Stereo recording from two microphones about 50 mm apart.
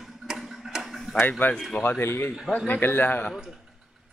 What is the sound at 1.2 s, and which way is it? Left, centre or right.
A man's voice, left.